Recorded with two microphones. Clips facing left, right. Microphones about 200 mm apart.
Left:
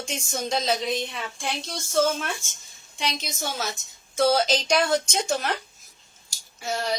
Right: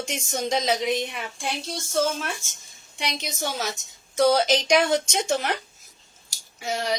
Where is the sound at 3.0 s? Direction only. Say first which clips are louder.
Right 1 dB; 15° right (ahead or behind).